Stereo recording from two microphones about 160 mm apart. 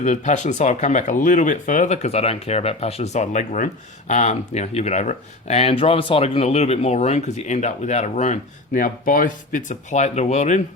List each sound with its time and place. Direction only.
0.0 s speech: 45° left (ahead or behind)